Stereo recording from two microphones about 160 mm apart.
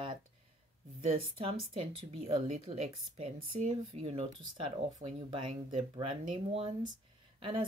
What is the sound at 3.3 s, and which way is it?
Speech, 60° right (ahead or behind).